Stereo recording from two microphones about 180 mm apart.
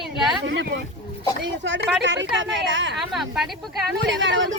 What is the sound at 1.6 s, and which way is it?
Speech, 90° right.